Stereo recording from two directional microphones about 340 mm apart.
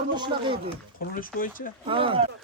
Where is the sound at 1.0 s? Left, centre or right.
Left.